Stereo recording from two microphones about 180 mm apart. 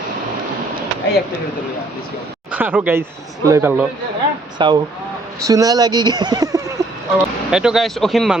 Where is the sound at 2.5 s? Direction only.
10° right (ahead or behind).